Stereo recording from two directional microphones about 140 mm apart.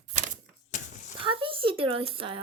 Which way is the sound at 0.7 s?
60° left (ahead or behind).